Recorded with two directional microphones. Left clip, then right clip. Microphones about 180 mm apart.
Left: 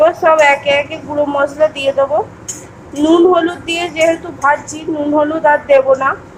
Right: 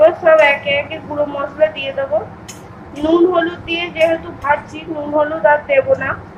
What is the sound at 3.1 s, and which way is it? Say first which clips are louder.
A woman's voice: left 3 dB; 40° left (ahead or behind).